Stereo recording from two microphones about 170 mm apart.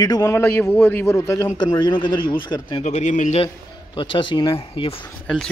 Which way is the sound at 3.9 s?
30° left (ahead or behind).